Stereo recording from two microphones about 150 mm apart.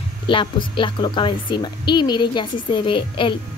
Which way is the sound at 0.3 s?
35° left (ahead or behind).